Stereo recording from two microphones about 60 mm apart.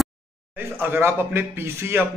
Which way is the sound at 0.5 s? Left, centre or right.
Right.